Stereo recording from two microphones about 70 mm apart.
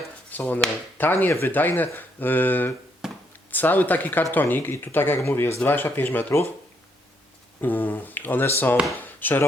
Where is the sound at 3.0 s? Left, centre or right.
Centre.